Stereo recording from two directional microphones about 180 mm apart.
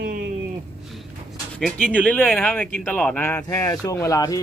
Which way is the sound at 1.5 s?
5° left (ahead or behind).